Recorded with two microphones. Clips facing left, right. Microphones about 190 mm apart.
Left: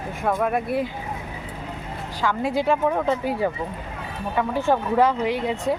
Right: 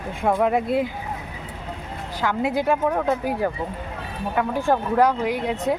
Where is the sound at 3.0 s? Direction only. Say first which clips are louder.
Even; 10° right (ahead or behind).